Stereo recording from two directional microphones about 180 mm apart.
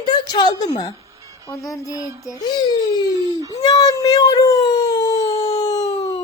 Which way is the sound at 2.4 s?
25° left (ahead or behind).